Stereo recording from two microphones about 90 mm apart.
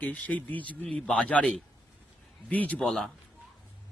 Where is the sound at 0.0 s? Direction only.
15° left (ahead or behind).